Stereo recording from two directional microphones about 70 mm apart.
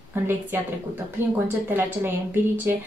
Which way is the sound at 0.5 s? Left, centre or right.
Right.